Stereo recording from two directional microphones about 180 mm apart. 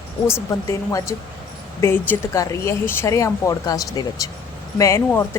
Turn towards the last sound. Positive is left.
turn(degrees=10)  # may be behind; listen again after turning